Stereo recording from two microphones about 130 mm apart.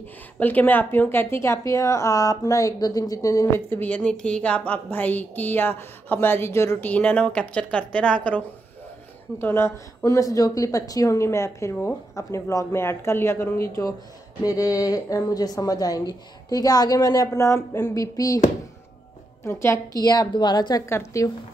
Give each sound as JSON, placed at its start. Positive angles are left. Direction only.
{"t": 0.4, "sound": "a woman's voice", "side_deg": 15}
{"t": 9.4, "sound": "a woman's voice", "side_deg": 20}
{"t": 19.4, "sound": "a woman's voice", "side_deg": 20}
{"t": 20.9, "sound": "a woman's voice", "side_deg": 20}